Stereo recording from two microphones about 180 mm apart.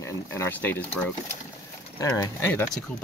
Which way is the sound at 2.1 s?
15° left (ahead or behind).